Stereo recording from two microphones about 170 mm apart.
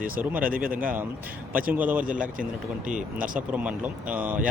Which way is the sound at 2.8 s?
50° right (ahead or behind).